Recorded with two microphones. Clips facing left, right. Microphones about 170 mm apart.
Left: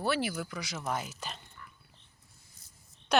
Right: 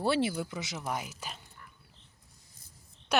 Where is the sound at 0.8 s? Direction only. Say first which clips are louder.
Left 3 dB; 10° right (ahead or behind).